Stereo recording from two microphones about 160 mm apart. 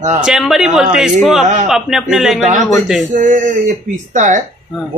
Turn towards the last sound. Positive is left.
turn(degrees=-50)  # may be behind; listen again after turning